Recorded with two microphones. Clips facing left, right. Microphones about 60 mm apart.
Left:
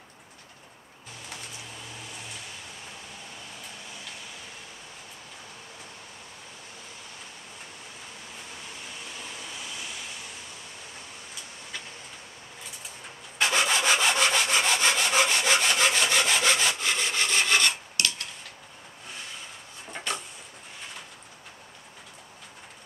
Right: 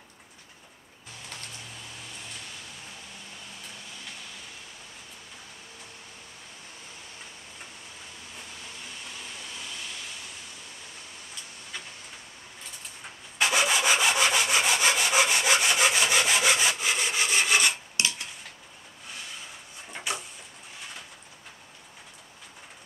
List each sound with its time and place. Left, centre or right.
13.4 s sawing: centre
17.9 s cutlery: centre
20.1 s a sound: centre